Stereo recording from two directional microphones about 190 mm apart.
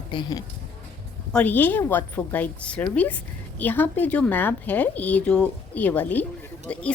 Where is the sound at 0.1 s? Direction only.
20° left (ahead or behind).